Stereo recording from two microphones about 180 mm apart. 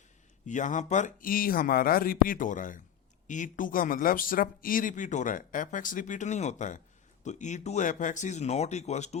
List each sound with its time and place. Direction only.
0.4 s speech: 45° left (ahead or behind)